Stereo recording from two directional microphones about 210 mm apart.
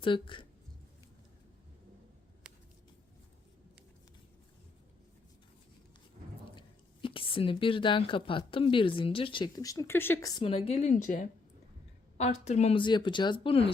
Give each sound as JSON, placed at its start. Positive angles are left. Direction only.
{"t": 0.0, "sound": "speech", "side_deg": 25}
{"t": 6.6, "sound": "speech", "side_deg": 25}